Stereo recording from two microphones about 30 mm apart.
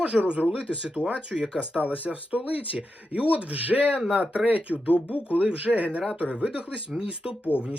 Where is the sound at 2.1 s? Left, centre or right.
Right.